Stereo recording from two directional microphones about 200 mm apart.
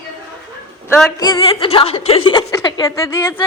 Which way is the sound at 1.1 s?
20° left (ahead or behind).